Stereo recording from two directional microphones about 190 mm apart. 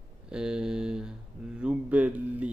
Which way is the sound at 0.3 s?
5° right (ahead or behind).